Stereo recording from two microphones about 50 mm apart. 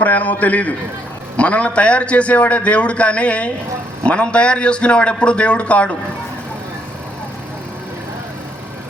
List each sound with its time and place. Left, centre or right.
0.0 s a man's voice: left